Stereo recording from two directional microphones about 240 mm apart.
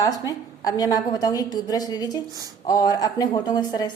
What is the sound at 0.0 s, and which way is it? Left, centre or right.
A woman's voice, centre.